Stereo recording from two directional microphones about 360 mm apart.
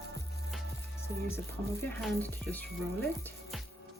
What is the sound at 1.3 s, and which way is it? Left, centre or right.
Speech, centre.